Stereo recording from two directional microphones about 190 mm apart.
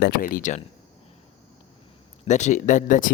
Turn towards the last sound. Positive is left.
turn(degrees=45)  # may be behind; listen again after turning